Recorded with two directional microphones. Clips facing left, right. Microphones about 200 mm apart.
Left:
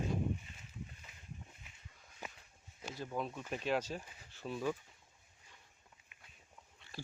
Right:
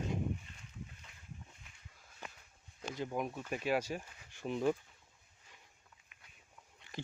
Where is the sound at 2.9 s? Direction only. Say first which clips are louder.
Right 3 dB; 20° right (ahead or behind).